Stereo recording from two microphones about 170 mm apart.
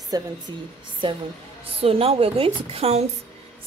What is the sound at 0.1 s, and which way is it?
Speech, 25° right (ahead or behind).